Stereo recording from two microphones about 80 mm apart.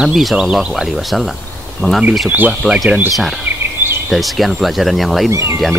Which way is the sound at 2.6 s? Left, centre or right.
Centre.